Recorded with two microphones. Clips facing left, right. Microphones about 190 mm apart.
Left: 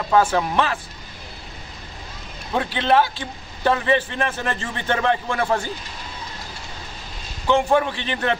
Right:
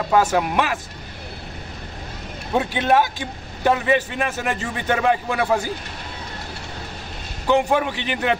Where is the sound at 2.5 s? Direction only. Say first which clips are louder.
Right 1 dB; 15° right (ahead or behind).